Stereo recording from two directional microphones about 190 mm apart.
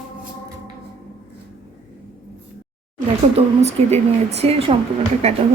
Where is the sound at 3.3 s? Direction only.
35° right (ahead or behind).